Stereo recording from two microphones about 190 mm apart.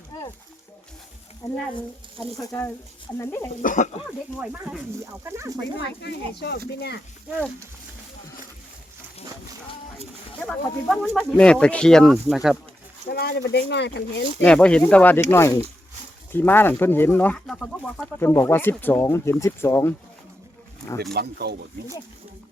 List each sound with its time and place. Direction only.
1.4 s speech: 35° left (ahead or behind)
2.4 s speech: 15° left (ahead or behind)
3.6 s speech: 45° left (ahead or behind)
4.4 s speech: 10° right (ahead or behind)
5.7 s speech: 65° left (ahead or behind)
10.9 s speech: centre (ahead or behind)
13.1 s speech: 55° left (ahead or behind)
14.4 s speech: 5° left (ahead or behind)
21.1 s speech: 60° right (ahead or behind)